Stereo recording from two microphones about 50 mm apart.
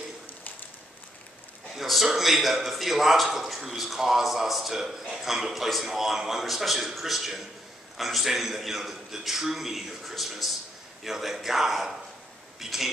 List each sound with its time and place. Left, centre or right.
1.8 s a man's voice: centre